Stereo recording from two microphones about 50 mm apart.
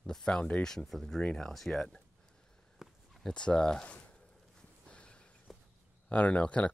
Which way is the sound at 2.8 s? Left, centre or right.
Centre.